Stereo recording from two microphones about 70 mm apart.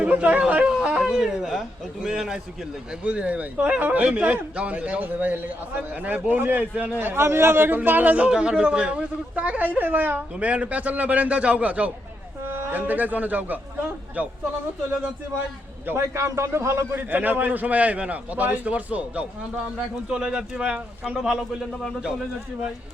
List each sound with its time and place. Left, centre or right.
0.0 s speech: centre
15.9 s a man's voice: right
17.0 s speech: right; by 21.4 s centre
21.7 s speech: centre